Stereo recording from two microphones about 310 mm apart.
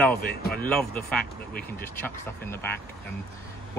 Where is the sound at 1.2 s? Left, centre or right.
Left.